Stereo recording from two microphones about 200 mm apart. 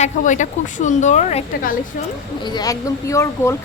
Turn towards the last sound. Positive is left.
turn(degrees=15)  # may be behind; listen again after turning